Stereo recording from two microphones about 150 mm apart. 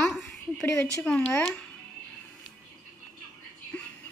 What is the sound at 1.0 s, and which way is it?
Speech, 5° left (ahead or behind).